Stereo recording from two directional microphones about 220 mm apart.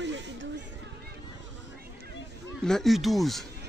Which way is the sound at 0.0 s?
55° right (ahead or behind).